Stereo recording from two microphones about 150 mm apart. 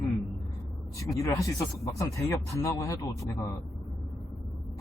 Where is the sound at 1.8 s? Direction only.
20° left (ahead or behind).